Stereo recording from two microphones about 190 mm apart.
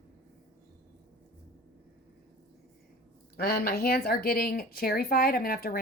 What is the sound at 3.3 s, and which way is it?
Speech, 55° left (ahead or behind).